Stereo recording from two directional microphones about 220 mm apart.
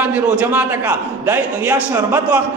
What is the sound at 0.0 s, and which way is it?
A man's voice, 5° right (ahead or behind).